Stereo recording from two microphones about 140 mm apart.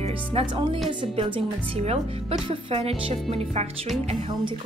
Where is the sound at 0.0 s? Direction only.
45° right (ahead or behind).